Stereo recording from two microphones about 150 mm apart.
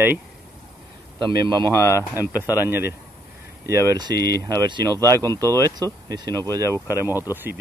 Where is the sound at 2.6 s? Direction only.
15° right (ahead or behind).